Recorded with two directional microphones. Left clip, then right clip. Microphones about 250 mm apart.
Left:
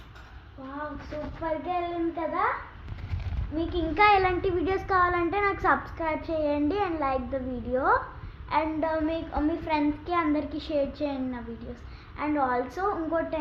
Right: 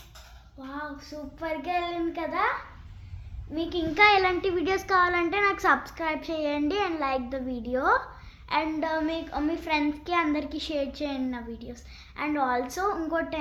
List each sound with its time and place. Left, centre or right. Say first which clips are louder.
1.4 s a child's voice: right 1 dB; right
3.5 s a child's voice: even; right